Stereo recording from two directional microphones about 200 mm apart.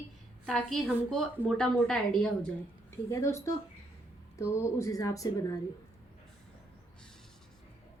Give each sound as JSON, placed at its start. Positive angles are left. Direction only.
{"t": 0.4, "sound": "a woman's voice", "side_deg": 0}
{"t": 3.1, "sound": "a woman's voice", "side_deg": 15}